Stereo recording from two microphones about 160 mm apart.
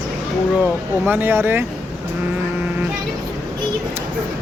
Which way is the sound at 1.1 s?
15° right (ahead or behind).